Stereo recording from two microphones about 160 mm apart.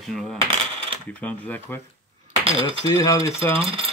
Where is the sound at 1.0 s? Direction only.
10° left (ahead or behind).